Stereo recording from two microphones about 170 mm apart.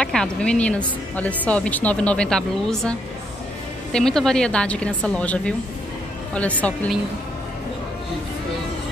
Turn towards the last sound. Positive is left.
turn(degrees=10)  # may be behind; listen again after turning